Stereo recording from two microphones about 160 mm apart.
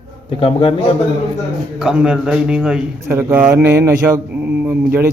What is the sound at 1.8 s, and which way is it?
Speech, 5° right (ahead or behind).